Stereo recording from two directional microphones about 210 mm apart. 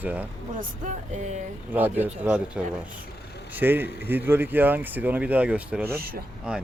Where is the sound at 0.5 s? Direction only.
35° right (ahead or behind).